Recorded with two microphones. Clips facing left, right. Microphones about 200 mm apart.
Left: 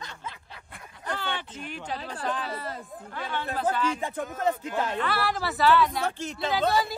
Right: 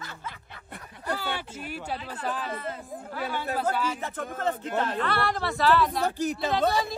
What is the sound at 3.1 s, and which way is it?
Speech, 5° right (ahead or behind).